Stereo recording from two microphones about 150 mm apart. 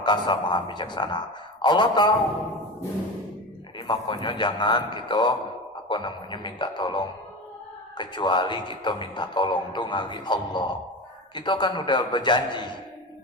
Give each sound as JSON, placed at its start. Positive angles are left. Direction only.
{"t": 0.0, "sound": "a man's voice", "side_deg": 30}
{"t": 3.8, "sound": "speech", "side_deg": 35}